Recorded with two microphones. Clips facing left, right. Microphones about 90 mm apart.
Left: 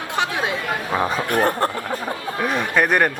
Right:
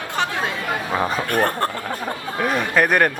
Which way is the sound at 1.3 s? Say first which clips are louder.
Left 3 dB; 15° left (ahead or behind).